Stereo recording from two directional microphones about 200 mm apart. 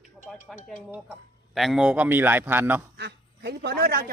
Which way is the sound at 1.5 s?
Centre (ahead or behind).